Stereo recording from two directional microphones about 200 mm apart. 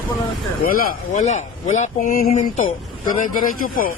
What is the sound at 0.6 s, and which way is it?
Speech, 40° left (ahead or behind).